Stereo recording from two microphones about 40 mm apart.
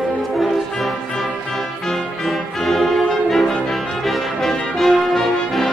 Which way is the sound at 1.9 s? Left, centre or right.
Centre.